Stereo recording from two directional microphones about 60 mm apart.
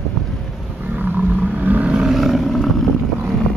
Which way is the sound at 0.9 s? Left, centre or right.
Right.